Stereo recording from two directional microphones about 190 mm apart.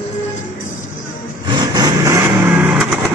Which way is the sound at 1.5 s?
20° right (ahead or behind).